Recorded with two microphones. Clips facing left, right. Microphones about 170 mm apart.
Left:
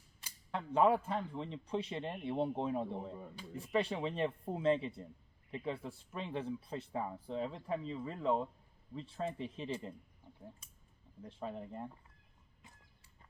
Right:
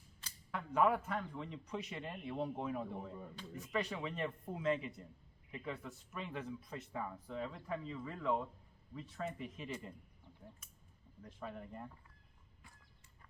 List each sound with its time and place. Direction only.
0.5 s speech: 30° left (ahead or behind)
11.2 s speech: 25° left (ahead or behind)